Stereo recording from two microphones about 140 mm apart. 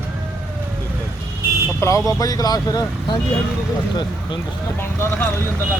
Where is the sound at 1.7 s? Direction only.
20° left (ahead or behind).